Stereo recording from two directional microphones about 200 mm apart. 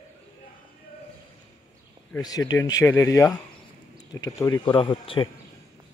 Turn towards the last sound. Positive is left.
turn(degrees=25)  # may be behind; listen again after turning